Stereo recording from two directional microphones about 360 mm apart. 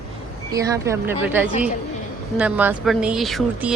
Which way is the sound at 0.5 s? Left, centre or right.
Centre.